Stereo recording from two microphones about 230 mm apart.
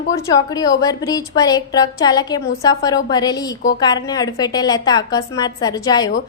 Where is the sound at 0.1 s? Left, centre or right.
Centre.